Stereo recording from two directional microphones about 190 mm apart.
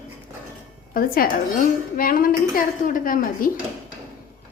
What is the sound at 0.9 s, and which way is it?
A woman's voice, 50° left (ahead or behind).